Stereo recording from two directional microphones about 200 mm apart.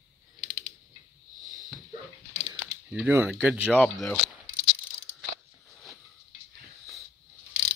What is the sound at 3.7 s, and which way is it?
Speech, 5° left (ahead or behind).